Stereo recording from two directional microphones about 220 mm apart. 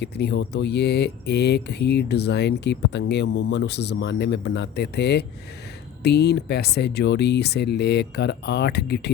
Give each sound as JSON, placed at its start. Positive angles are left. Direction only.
{"t": 0.0, "sound": "speech", "side_deg": 50}